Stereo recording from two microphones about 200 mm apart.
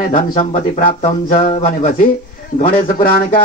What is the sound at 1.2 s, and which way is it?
Speech, 40° left (ahead or behind).